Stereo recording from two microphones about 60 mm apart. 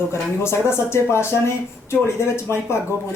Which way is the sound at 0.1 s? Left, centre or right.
Left.